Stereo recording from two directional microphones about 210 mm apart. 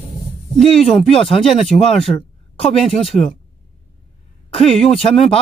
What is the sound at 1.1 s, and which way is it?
Speech, 25° left (ahead or behind).